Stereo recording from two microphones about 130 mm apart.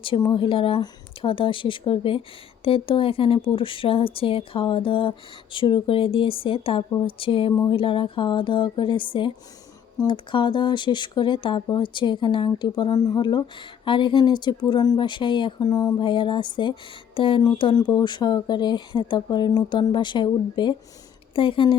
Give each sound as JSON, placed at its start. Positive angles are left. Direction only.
{"t": 0.0, "sound": "speech", "side_deg": 40}